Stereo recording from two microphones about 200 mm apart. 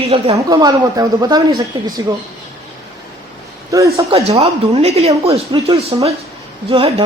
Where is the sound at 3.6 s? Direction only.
15° right (ahead or behind).